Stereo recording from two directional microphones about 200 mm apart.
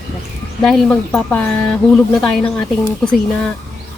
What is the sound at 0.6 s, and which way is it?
A woman's voice, 5° left (ahead or behind).